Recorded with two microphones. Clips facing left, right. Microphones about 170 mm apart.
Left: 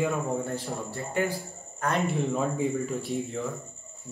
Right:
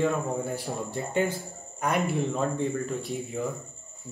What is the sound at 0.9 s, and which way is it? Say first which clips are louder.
Speech: right 2 dB; 20° right (ahead or behind).